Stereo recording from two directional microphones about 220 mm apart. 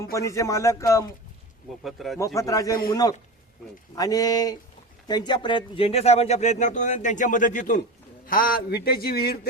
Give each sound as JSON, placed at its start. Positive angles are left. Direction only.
{"t": 0.1, "sound": "speech", "side_deg": 15}
{"t": 1.8, "sound": "speech", "side_deg": 0}
{"t": 2.1, "sound": "a man's voice", "side_deg": 15}